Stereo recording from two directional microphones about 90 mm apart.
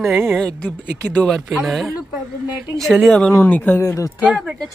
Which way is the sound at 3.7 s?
35° left (ahead or behind).